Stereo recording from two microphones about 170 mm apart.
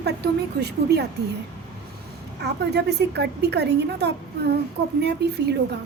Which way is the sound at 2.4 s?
75° right (ahead or behind).